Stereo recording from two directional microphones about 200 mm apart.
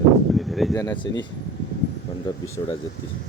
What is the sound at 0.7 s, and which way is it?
Speech, 15° left (ahead or behind).